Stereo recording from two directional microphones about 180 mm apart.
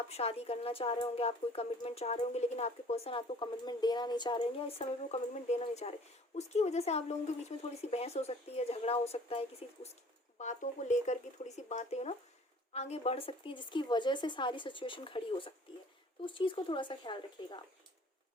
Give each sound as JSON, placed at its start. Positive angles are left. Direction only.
{"t": 0.1, "sound": "speech", "side_deg": 35}